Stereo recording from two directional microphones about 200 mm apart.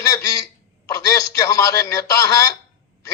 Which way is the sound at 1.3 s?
15° left (ahead or behind).